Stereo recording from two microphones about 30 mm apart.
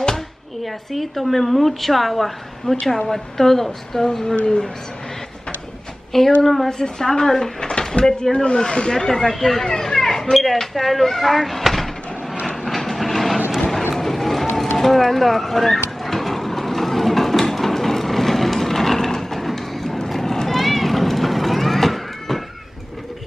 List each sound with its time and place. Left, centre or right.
0.9 s a woman's voice: centre
2.9 s a woman's voice: centre
6.1 s a woman's voice: centre
6.7 s a woman's voice: centre
8.2 s speech: left
9.0 s a woman's voice: centre
9.7 s a sound: centre
10.3 s speech: centre
12.6 s train: centre
13.9 s run: centre
14.8 s a sound: centre
20.1 s run: centre
20.4 s a sound: centre